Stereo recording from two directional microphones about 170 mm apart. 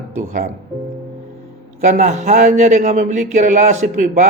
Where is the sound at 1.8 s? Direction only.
45° right (ahead or behind).